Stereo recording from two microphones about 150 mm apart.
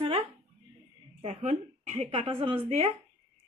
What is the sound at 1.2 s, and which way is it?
A woman's voice, 50° right (ahead or behind).